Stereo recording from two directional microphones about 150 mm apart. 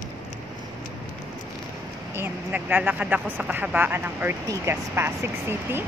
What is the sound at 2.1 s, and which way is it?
Speech, 15° right (ahead or behind).